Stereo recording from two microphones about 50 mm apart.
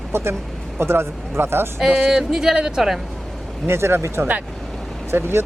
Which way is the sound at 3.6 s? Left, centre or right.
Right.